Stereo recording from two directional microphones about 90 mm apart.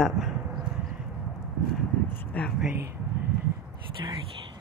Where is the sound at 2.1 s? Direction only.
20° left (ahead or behind).